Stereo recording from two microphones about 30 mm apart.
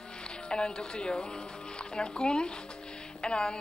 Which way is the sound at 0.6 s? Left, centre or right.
Left.